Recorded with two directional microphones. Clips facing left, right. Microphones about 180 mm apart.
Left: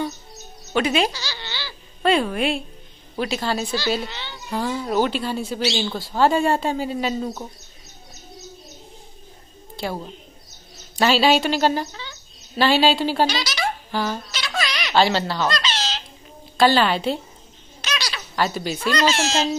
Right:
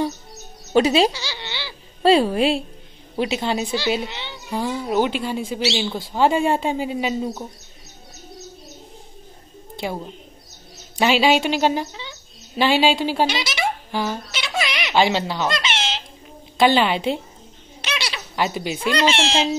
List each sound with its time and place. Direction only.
0.7 s speech: 30° right (ahead or behind)
3.2 s speech: 20° right (ahead or behind)
9.8 s a woman's voice: 15° right (ahead or behind)
13.3 s a sound: 25° right (ahead or behind)
16.5 s speech: 20° right (ahead or behind)
17.8 s a sound: 25° right (ahead or behind)
18.3 s speech: 15° right (ahead or behind)
19.0 s speech: 30° right (ahead or behind)